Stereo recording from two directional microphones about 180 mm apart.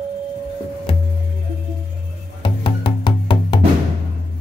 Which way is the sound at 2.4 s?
30° left (ahead or behind).